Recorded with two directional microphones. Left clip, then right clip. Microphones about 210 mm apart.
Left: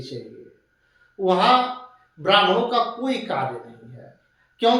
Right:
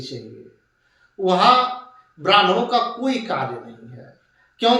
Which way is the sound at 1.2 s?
20° right (ahead or behind).